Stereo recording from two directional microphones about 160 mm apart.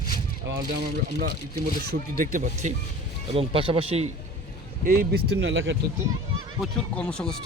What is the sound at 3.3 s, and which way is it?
Speech, 35° right (ahead or behind).